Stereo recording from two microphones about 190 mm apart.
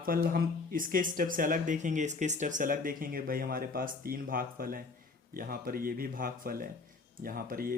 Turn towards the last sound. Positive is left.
turn(degrees=-50)  # may be behind; listen again after turning